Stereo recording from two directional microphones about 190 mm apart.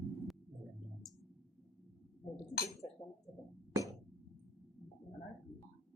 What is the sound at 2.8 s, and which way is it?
Chink, 20° left (ahead or behind).